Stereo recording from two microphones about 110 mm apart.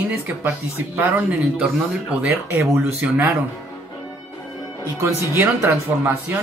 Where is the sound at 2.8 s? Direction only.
15° right (ahead or behind).